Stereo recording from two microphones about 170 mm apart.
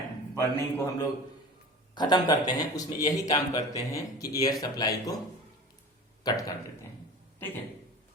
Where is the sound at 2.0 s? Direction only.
25° left (ahead or behind).